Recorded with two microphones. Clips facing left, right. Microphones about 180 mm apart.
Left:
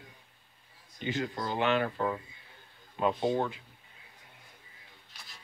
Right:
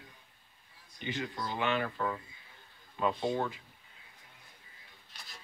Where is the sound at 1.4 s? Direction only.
35° left (ahead or behind); by 3.5 s 20° left (ahead or behind).